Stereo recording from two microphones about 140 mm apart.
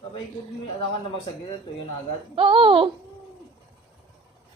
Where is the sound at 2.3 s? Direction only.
40° right (ahead or behind).